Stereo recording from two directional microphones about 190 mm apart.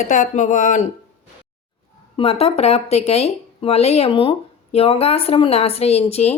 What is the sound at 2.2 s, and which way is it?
Speech, 30° left (ahead or behind).